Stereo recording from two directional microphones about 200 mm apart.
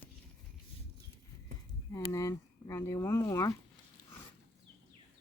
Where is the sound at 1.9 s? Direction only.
15° left (ahead or behind).